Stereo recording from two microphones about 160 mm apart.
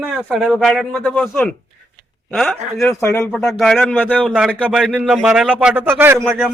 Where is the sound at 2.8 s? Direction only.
15° left (ahead or behind).